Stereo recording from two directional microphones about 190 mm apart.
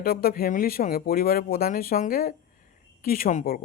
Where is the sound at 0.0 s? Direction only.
50° left (ahead or behind).